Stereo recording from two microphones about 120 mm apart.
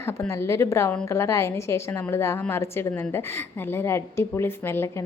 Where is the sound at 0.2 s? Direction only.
20° left (ahead or behind).